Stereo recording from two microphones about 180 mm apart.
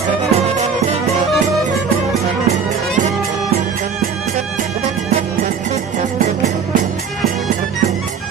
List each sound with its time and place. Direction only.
0.3 s music: 35° right (ahead or behind)